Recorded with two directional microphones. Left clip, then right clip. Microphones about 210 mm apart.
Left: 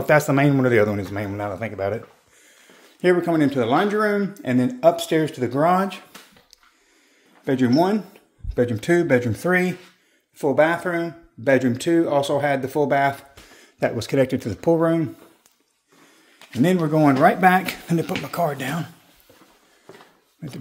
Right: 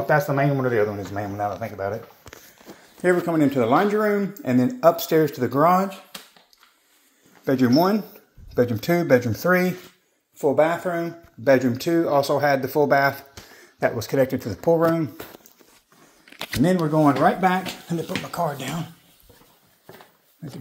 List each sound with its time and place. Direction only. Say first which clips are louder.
0.2 s speech: left 3 dB; 55° left (ahead or behind)
1.1 s speech: right 1 dB; 35° left (ahead or behind)
3.3 s speech: even; 10° left (ahead or behind)
7.4 s speech: even; 10° left (ahead or behind)
13.6 s speech: even; 35° left (ahead or behind)
16.6 s speech: left 1 dB; 25° left (ahead or behind)
20.4 s speech: left 2 dB; 30° left (ahead or behind)